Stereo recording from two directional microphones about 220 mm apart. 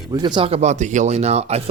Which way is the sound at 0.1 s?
20° right (ahead or behind).